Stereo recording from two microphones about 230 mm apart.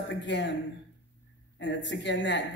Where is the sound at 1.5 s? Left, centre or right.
Left.